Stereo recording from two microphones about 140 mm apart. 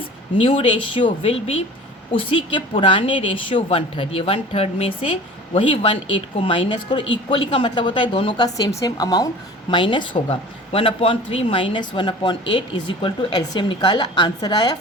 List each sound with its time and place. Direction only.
0.3 s speech: 45° left (ahead or behind)